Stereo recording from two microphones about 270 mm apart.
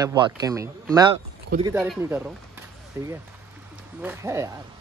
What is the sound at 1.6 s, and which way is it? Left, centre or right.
Speech, centre.